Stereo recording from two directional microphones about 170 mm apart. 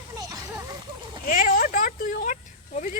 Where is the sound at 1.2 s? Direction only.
55° left (ahead or behind).